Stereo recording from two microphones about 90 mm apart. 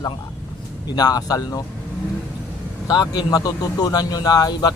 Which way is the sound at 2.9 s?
50° left (ahead or behind).